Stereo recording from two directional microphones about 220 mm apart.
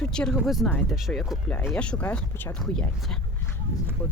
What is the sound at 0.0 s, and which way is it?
Speech, 5° left (ahead or behind).